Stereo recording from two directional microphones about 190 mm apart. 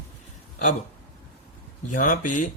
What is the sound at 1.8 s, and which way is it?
Speech, 45° left (ahead or behind).